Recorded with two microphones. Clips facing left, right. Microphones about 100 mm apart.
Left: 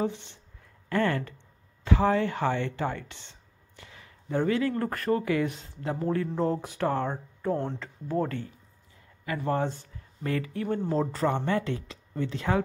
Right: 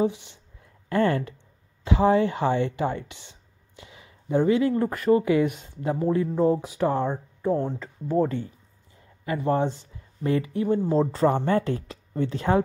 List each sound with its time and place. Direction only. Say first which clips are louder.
0.0 s speech: right 5 dB; 15° right (ahead or behind)
9.5 s speech: right 4 dB; 15° right (ahead or behind)
11.0 s speech: right 5 dB; 30° right (ahead or behind)